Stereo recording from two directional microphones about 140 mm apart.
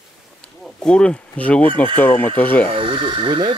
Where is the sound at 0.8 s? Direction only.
5° left (ahead or behind).